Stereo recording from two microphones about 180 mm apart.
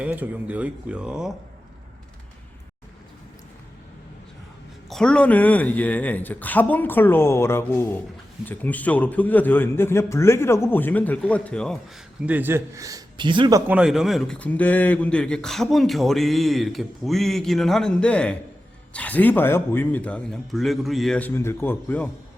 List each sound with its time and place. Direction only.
0.0 s speech: 5° right (ahead or behind)
4.9 s a man's voice: 5° left (ahead or behind)
12.2 s a man's voice: 10° right (ahead or behind); by 13.6 s 25° right (ahead or behind)
13.7 s a man's voice: 5° right (ahead or behind)